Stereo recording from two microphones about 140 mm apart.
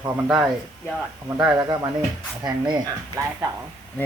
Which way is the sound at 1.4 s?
20° right (ahead or behind).